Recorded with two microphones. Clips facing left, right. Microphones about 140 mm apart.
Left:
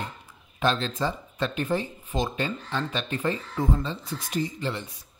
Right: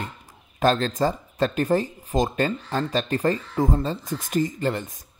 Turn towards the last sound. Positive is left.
turn(degrees=-45)  # may be behind; listen again after turning